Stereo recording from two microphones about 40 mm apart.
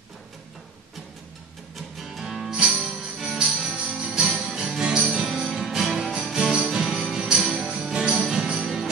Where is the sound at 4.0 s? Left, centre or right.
Centre.